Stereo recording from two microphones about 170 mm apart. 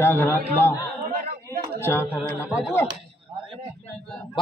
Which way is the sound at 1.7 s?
15° left (ahead or behind).